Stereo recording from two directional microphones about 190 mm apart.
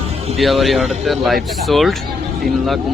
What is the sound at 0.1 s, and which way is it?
Music, 35° right (ahead or behind).